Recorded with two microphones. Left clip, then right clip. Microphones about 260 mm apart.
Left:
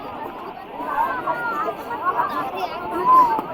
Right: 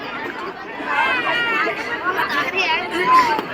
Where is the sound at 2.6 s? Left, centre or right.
Left.